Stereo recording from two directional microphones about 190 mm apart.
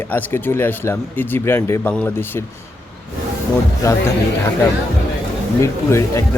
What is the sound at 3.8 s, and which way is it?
Speech, 15° left (ahead or behind).